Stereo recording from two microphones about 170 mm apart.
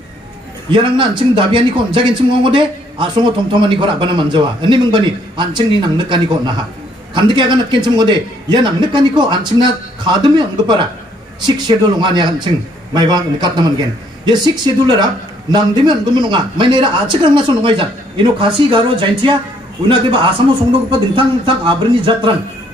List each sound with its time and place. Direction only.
0.7 s a man's voice: 30° right (ahead or behind)